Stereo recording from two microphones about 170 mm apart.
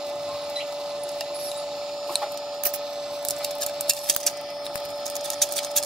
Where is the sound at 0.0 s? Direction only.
5° right (ahead or behind).